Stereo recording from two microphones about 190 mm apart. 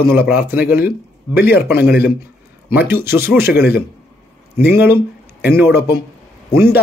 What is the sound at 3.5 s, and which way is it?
Speech, 55° left (ahead or behind).